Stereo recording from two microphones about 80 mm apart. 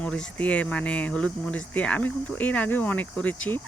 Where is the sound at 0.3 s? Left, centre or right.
Centre.